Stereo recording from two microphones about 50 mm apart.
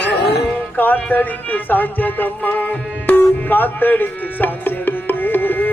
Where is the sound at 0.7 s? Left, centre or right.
Left.